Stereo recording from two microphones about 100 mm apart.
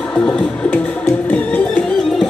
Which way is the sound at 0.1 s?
10° left (ahead or behind).